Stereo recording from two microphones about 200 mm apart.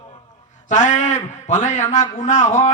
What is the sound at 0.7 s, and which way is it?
A man's voice, 35° left (ahead or behind).